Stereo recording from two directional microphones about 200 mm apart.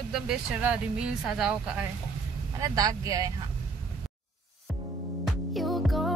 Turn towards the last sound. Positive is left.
turn(degrees=0)  # may be behind; listen again after turning